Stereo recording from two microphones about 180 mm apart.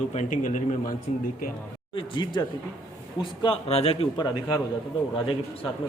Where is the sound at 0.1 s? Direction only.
40° left (ahead or behind).